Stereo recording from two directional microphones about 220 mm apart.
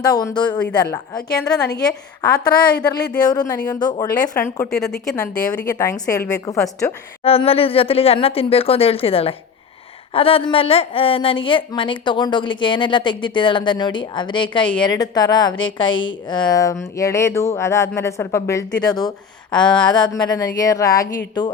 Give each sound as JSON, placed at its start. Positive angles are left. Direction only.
{"t": 0.0, "sound": "a woman's voice", "side_deg": 15}
{"t": 6.6, "sound": "a woman's voice", "side_deg": 0}
{"t": 7.3, "sound": "a woman's voice", "side_deg": 25}
{"t": 19.6, "sound": "a woman's voice", "side_deg": 5}
{"t": 19.9, "sound": "a woman's voice", "side_deg": 20}